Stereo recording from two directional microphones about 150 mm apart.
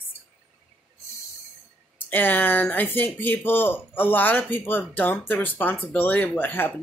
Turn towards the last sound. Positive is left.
turn(degrees=15)  # may be behind; listen again after turning